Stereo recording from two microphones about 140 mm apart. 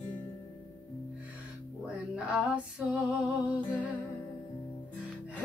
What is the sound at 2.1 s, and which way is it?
Female singing, 5° right (ahead or behind).